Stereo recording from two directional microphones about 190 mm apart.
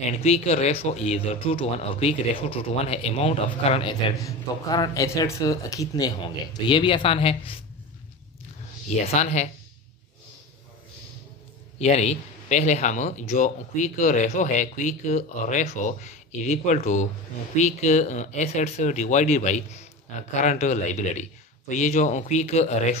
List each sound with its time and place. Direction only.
0.2 s speech: 35° left (ahead or behind)
4.2 s speech: 20° left (ahead or behind)
9.0 s speech: 35° left (ahead or behind)
11.8 s speech: 35° left (ahead or behind)